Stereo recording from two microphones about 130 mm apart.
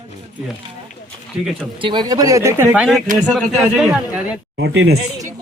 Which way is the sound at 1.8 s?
35° right (ahead or behind).